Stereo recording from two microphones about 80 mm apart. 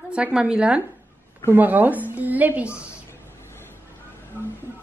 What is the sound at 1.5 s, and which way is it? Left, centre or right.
Speech, right.